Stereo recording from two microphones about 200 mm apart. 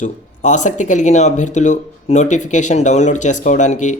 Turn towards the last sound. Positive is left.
turn(degrees=35)  # may be behind; listen again after turning